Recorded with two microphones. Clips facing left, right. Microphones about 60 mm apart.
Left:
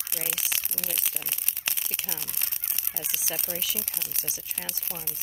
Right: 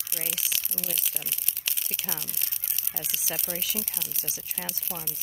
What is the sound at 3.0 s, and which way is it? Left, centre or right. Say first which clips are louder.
Speech: even; left.